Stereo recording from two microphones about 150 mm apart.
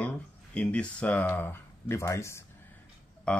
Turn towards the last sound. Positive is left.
turn(degrees=5)  # may be behind; listen again after turning